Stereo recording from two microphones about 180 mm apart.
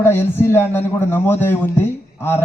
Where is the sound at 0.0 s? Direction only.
10° left (ahead or behind).